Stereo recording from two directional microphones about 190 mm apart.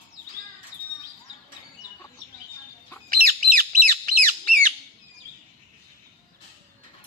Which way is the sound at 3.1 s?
50° right (ahead or behind).